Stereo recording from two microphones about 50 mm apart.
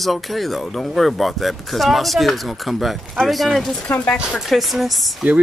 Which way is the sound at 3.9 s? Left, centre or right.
Left.